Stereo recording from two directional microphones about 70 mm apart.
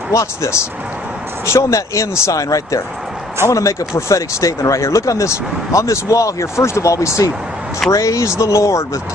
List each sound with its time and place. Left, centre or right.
0.1 s speech: left